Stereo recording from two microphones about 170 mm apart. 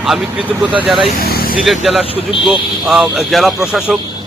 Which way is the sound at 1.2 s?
65° left (ahead or behind).